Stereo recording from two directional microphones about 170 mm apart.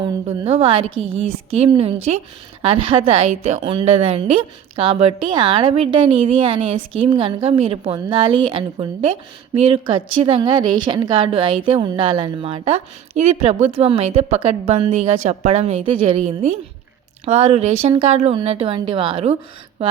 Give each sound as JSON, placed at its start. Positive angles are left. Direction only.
{"t": 0.0, "sound": "a woman's voice", "side_deg": -35}